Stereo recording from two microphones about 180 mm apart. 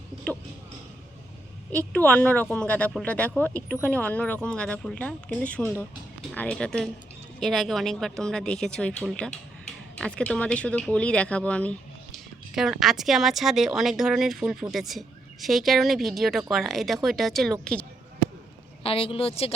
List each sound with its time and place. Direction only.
2.0 s speech: 10° left (ahead or behind)
18.8 s speech: 30° left (ahead or behind)